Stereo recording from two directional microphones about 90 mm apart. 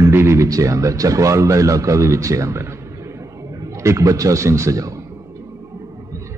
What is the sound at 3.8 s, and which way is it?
A man's voice, 35° right (ahead or behind).